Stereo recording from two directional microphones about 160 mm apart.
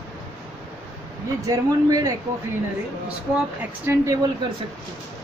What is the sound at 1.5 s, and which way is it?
Speech, 20° right (ahead or behind).